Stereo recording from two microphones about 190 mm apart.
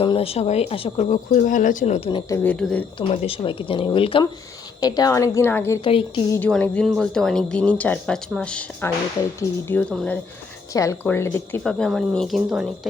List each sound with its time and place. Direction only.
0.0 s a woman's voice: 30° left (ahead or behind)
2.0 s speech: 25° left (ahead or behind)
2.4 s a woman's voice: 5° left (ahead or behind)
3.0 s a woman's voice: 30° left (ahead or behind); by 5.8 s 15° left (ahead or behind)
5.8 s speech: 30° left (ahead or behind)
6.3 s a woman's voice: 10° left (ahead or behind)
11.6 s speech: centre (ahead or behind)